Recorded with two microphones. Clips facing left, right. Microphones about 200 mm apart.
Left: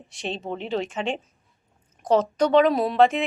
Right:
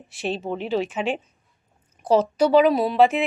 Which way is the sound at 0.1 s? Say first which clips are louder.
Right 4 dB; 5° right (ahead or behind).